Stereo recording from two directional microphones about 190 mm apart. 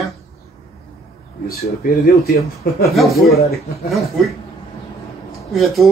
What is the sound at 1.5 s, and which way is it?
Speech, 55° left (ahead or behind).